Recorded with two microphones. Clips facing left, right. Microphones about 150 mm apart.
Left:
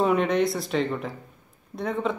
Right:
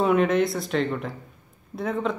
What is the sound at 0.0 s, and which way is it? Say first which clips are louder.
Speech: right 1 dB; centre (ahead or behind).